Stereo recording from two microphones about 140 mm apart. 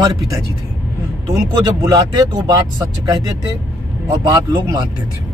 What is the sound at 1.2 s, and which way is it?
A man's voice, 25° right (ahead or behind).